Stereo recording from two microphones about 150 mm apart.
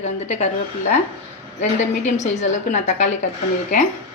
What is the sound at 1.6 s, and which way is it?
A woman's voice, 50° left (ahead or behind).